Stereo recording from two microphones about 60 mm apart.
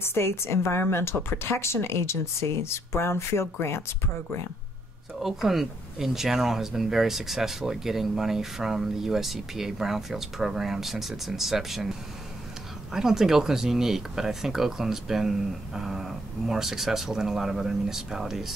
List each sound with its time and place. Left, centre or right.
0.0 s a woman's voice: left
5.2 s speech: centre